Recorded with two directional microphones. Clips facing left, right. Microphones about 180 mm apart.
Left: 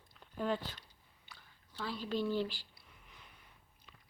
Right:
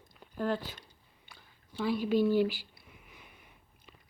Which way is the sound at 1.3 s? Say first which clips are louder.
Right 1 dB; 50° right (ahead or behind).